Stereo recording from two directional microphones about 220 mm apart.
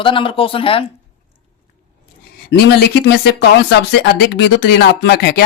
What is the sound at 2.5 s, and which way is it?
Speech, 45° left (ahead or behind).